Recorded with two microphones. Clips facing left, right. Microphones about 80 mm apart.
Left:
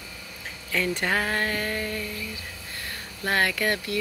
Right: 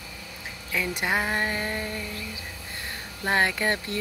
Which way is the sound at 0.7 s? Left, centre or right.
Centre.